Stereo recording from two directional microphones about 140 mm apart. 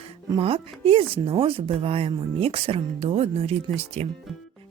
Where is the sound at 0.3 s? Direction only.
40° right (ahead or behind).